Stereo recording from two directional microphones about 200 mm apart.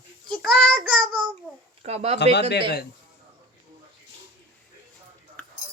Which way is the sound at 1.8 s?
30° right (ahead or behind).